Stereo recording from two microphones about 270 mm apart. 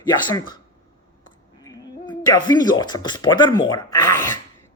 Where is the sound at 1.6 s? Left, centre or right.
Centre.